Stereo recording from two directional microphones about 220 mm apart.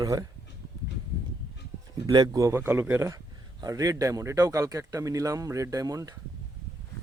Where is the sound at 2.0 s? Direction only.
20° right (ahead or behind).